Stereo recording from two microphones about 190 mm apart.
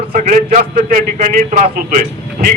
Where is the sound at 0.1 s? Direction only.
45° right (ahead or behind).